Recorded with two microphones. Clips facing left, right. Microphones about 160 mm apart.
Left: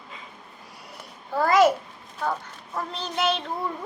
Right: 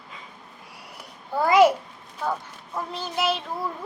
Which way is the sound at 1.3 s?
10° right (ahead or behind).